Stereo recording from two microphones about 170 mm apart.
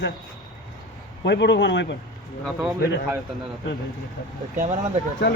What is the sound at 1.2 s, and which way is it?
Speech, 90° left.